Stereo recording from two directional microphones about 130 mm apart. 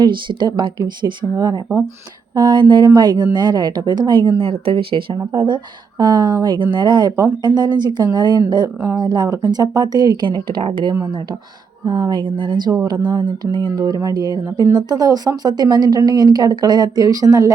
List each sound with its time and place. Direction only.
0.0 s speech: 35° right (ahead or behind)